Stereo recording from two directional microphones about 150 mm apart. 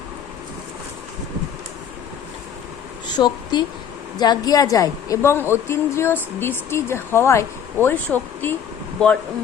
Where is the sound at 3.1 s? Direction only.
30° left (ahead or behind); by 8.6 s 10° left (ahead or behind).